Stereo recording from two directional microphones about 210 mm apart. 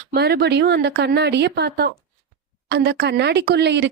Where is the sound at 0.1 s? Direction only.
50° right (ahead or behind).